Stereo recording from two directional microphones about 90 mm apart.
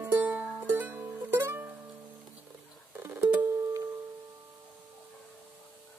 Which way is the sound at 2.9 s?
25° right (ahead or behind).